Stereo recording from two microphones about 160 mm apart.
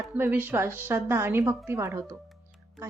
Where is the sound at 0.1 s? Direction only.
10° right (ahead or behind).